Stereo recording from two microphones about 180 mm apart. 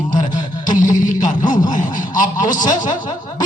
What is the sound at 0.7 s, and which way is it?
Speech, 45° left (ahead or behind).